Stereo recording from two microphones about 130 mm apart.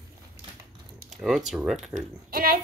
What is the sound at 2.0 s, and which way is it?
Speech, 90° right.